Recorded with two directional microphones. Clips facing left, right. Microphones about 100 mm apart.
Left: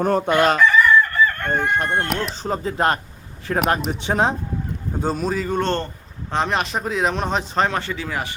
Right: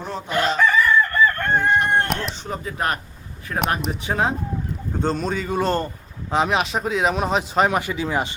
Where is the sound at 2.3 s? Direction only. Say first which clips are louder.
Left 5 dB; 35° left (ahead or behind).